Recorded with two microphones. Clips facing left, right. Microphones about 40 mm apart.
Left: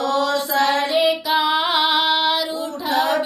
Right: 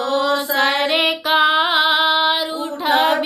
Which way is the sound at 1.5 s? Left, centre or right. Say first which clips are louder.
Right 2 dB; right.